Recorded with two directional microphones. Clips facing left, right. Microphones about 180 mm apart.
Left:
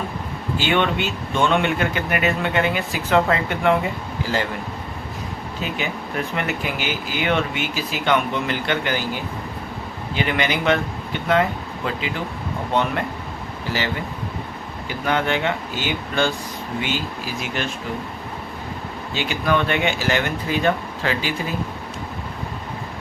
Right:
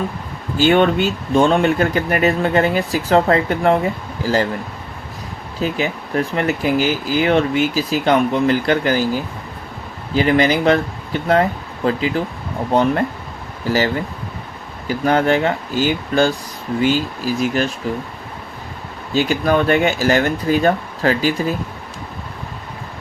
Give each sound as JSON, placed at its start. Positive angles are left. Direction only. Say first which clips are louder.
{"t": 0.5, "sound": "speech", "louder": "right 7 dB", "side_deg": -40}
{"t": 5.5, "sound": "speech", "louder": "right 7 dB", "side_deg": -35}
{"t": 13.7, "sound": "speech", "louder": "right 8 dB", "side_deg": -40}
{"t": 19.1, "sound": "speech", "louder": "right 6 dB", "side_deg": -40}